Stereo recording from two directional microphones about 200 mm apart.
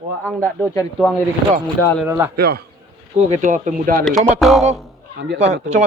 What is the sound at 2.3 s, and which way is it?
Speech, 50° right (ahead or behind).